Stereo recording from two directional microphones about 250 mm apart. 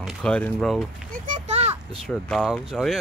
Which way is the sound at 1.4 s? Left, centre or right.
Right.